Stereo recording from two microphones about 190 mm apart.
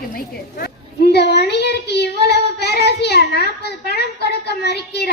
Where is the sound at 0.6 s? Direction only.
60° left (ahead or behind).